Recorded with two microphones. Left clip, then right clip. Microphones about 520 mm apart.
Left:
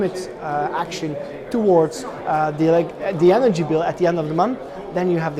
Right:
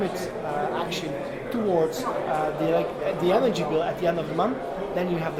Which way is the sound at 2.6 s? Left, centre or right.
Left.